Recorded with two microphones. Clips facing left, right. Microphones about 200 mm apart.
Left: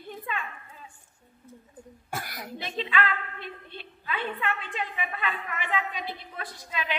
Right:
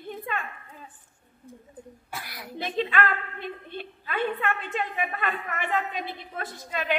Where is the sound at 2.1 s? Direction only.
45° left (ahead or behind).